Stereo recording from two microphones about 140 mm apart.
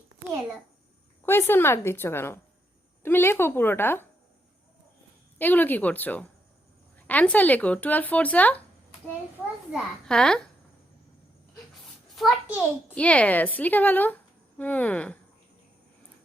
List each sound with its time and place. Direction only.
1.2 s speech: 15° left (ahead or behind)
5.4 s speech: 15° left (ahead or behind)
9.7 s a child's voice: 5° left (ahead or behind)
12.1 s a child's voice: centre (ahead or behind)